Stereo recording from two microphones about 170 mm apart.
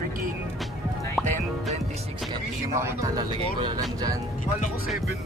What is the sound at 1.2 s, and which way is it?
Music, centre (ahead or behind).